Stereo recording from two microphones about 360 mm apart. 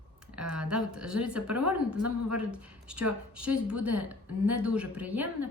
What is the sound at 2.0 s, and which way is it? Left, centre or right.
Speech, right.